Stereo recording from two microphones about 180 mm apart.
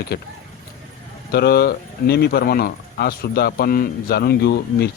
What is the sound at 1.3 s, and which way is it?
Speech, 60° left (ahead or behind).